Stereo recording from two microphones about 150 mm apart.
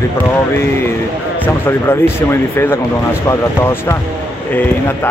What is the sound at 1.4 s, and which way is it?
Speech, 15° left (ahead or behind).